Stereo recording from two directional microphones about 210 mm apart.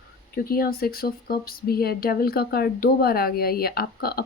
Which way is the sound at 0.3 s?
45° left (ahead or behind).